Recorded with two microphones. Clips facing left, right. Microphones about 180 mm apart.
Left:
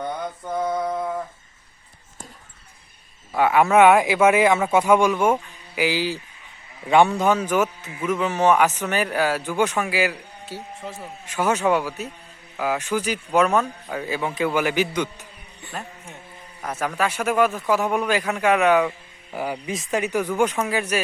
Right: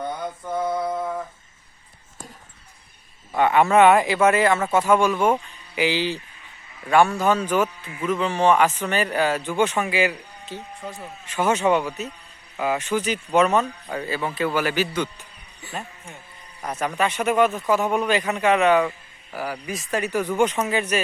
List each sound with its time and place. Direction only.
0.6 s a sound: 5° right (ahead or behind)
3.3 s speech: 5° left (ahead or behind)
6.8 s speech: 20° left (ahead or behind)
15.6 s a man's voice: centre (ahead or behind)
19.3 s speech: 20° left (ahead or behind)
20.3 s speech: 5° left (ahead or behind)